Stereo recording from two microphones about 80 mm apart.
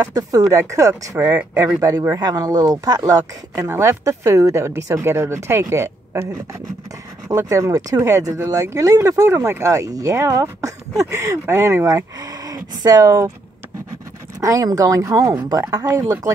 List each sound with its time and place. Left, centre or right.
0.0 s speech: right
1.1 s speech: right
2.1 s speech: right
3.6 s speech: right
7.2 s speech: right
14.4 s speech: right